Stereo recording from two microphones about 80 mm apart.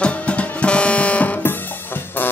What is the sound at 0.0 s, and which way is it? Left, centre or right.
Music, centre.